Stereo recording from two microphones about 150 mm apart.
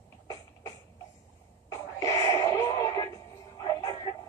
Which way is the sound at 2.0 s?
25° left (ahead or behind).